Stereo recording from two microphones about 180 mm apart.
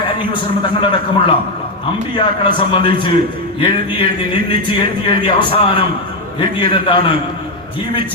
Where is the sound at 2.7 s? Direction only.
25° left (ahead or behind).